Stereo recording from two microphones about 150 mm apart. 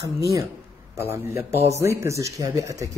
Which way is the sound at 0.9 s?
15° right (ahead or behind).